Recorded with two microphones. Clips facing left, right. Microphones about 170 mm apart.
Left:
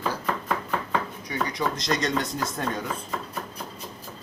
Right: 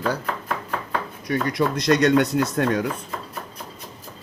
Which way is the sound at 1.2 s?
60° right (ahead or behind).